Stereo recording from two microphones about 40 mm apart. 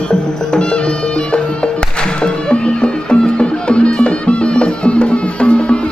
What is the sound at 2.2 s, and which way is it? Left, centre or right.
Music, left.